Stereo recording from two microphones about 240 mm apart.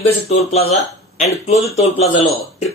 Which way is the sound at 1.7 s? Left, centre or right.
Left.